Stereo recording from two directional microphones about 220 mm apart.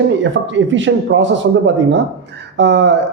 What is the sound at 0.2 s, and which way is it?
Speech, 60° right (ahead or behind).